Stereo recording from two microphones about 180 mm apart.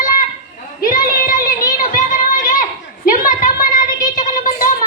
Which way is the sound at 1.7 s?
45° left (ahead or behind).